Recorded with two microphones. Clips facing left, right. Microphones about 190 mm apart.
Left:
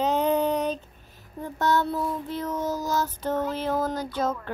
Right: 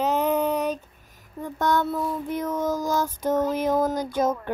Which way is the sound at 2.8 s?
10° right (ahead or behind).